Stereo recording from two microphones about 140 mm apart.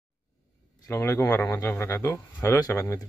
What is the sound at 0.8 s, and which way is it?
Speech, 20° left (ahead or behind).